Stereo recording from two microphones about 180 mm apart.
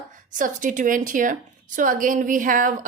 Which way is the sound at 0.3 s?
45° right (ahead or behind).